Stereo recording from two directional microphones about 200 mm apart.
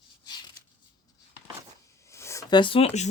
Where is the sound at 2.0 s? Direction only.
15° left (ahead or behind); by 3.1 s 30° left (ahead or behind).